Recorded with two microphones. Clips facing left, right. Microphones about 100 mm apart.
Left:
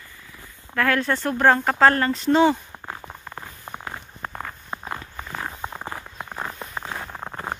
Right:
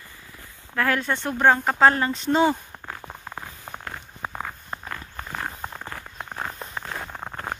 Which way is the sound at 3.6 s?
10° left (ahead or behind).